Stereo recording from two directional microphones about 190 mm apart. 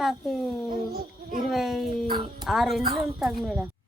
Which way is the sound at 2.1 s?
25° right (ahead or behind).